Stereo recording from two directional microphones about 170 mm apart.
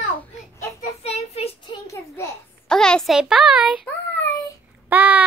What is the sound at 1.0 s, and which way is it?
Child singing, 35° left (ahead or behind).